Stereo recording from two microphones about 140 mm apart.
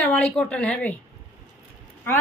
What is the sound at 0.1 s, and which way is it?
Speech, 10° left (ahead or behind).